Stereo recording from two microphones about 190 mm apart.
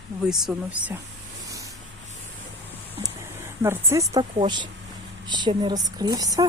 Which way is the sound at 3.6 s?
15° right (ahead or behind).